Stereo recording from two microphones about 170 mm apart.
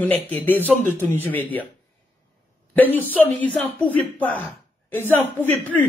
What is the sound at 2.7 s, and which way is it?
A woman's voice, 10° left (ahead or behind).